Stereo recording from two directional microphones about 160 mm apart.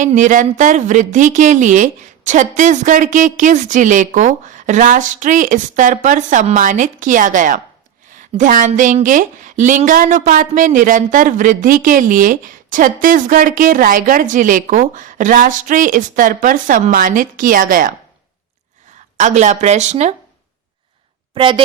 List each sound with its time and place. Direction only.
0.0 s a woman's voice: 50° right (ahead or behind)
19.1 s a woman's voice: 45° right (ahead or behind)
21.3 s speech: 30° right (ahead or behind)